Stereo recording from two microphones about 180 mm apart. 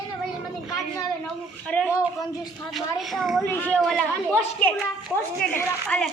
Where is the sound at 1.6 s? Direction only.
5° left (ahead or behind).